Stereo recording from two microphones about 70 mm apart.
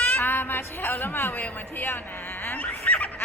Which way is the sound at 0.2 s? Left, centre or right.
Left.